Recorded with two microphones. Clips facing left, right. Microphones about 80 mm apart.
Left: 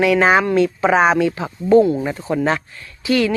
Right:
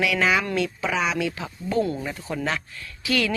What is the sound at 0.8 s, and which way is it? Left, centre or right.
Speech, left.